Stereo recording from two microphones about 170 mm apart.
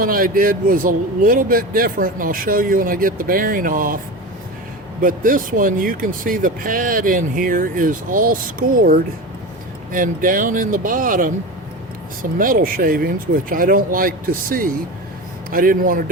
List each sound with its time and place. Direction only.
0.0 s speech: 55° right (ahead or behind)
12.4 s speech: 55° right (ahead or behind)